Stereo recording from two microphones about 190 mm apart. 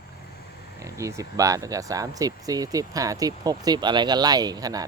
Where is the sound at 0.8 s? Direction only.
15° right (ahead or behind).